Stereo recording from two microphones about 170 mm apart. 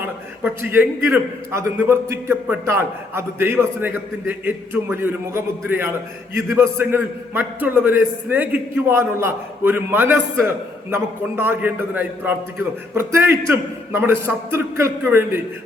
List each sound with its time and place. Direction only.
0.0 s a man's voice: 10° right (ahead or behind)